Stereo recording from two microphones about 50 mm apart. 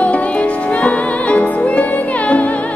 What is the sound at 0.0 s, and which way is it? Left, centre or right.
Music, left.